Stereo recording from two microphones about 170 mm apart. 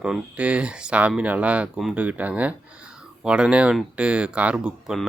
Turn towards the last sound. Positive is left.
turn(degrees=-5)  # may be behind; listen again after turning